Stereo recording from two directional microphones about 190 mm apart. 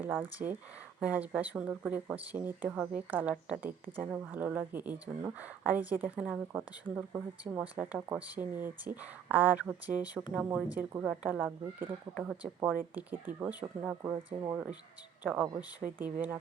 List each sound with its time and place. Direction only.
0.0 s speech: 10° right (ahead or behind)
14.1 s speech: 20° right (ahead or behind)
14.5 s speech: 5° right (ahead or behind)